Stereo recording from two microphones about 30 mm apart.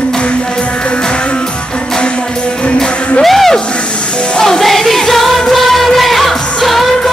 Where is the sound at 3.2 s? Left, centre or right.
Centre.